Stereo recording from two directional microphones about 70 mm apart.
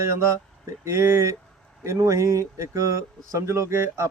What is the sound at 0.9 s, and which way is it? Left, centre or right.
Speech, right.